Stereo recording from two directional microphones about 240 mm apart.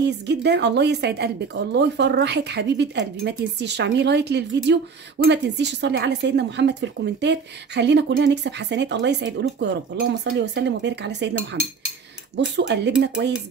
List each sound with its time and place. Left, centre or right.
0.0 s speech: right
12.4 s speech: right